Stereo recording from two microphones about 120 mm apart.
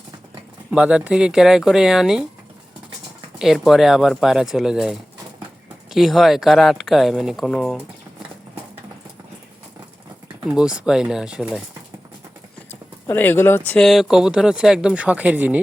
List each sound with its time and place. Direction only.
0.7 s speech: 10° right (ahead or behind)
3.3 s speech: 5° right (ahead or behind)
10.4 s speech: 5° right (ahead or behind)
13.1 s speech: 15° left (ahead or behind)
13.8 s speech: centre (ahead or behind)